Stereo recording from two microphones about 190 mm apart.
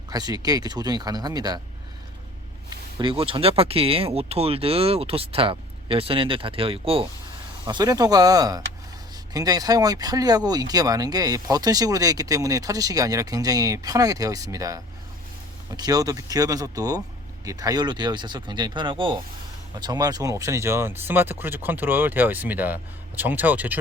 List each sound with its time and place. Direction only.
0.1 s speech: 20° right (ahead or behind)
3.0 s speech: 25° right (ahead or behind); by 23.7 s 10° right (ahead or behind)